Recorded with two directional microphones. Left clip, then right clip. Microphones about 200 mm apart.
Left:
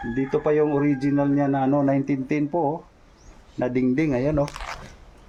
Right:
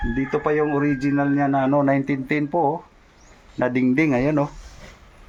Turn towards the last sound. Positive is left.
turn(degrees=-30)  # may be behind; listen again after turning